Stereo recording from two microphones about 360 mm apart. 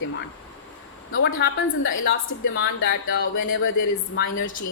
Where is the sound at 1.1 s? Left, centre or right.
Left.